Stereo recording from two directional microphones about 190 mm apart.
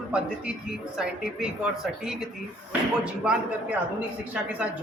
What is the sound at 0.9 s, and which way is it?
Speech, 5° right (ahead or behind).